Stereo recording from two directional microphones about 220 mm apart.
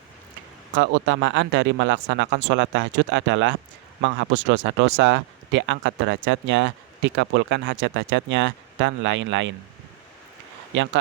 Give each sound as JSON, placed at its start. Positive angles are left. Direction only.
{"t": 0.8, "sound": "speech", "side_deg": -60}